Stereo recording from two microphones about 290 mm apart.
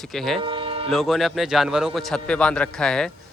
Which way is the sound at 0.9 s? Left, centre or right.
Centre.